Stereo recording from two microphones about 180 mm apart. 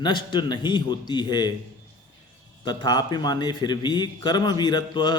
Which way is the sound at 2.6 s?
20° left (ahead or behind).